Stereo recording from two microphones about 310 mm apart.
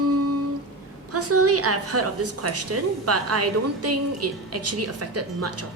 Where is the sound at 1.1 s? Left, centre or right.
Right.